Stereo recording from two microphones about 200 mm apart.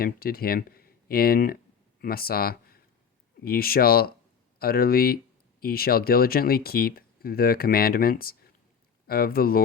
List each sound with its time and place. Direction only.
0.0 s speech: 50° left (ahead or behind)